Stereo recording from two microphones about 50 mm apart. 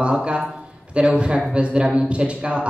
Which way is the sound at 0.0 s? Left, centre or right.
Right.